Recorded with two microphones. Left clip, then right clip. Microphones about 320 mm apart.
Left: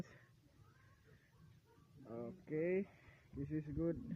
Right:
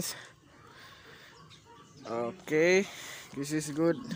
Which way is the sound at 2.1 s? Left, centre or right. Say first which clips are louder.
Right 15 dB; left.